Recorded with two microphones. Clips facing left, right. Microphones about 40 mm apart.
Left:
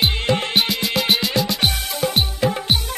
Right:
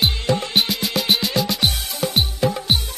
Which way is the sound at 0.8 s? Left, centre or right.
Centre.